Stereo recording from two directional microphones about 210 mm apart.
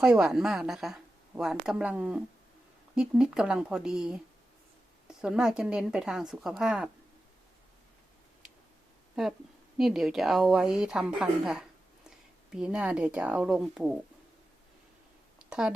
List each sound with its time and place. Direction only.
0.0 s speech: 5° right (ahead or behind)
9.7 s speech: centre (ahead or behind)
15.4 s a sound: 5° right (ahead or behind)